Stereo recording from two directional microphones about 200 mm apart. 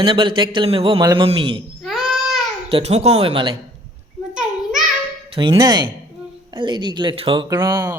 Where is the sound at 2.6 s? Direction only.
30° right (ahead or behind).